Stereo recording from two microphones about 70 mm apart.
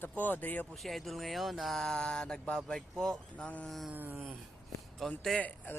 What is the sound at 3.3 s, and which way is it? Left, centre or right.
Speech, centre.